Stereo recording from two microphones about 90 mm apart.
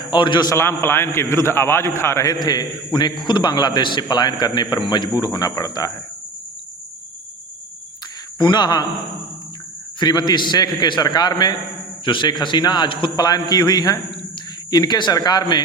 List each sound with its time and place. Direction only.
0.1 s a man's voice: 60° left (ahead or behind)
0.5 s a man's voice: 30° left (ahead or behind)
2.2 s a man's voice: 50° left (ahead or behind)
8.4 s a man's voice: 55° left (ahead or behind)
10.0 s a man's voice: 50° left (ahead or behind)
13.2 s a man's voice: 50° left (ahead or behind)